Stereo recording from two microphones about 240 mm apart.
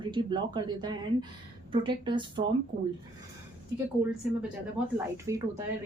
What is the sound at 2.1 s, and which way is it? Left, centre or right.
Speech, centre.